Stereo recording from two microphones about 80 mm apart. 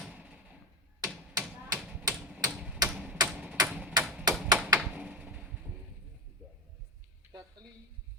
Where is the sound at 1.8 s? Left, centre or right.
Centre.